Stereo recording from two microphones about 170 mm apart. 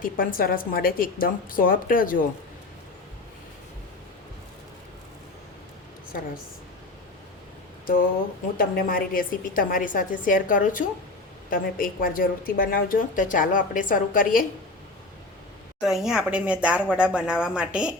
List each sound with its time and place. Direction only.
0.0 s a woman's voice: 55° left (ahead or behind)
8.5 s a woman's voice: 55° left (ahead or behind)
15.8 s speech: centre (ahead or behind)